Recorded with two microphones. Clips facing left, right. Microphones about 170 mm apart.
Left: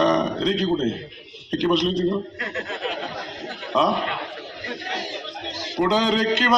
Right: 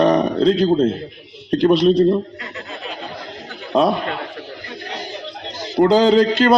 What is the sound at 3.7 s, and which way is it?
Speech, 35° right (ahead or behind).